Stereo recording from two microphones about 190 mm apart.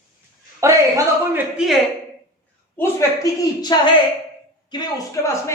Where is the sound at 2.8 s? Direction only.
15° left (ahead or behind).